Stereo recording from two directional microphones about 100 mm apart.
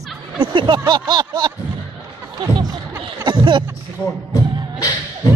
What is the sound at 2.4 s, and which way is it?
Speech, 60° right (ahead or behind).